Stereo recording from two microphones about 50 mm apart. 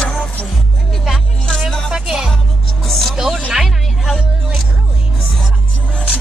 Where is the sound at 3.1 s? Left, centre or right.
Centre.